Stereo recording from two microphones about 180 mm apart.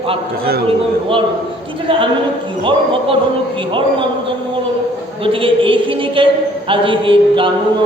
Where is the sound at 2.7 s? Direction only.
30° right (ahead or behind).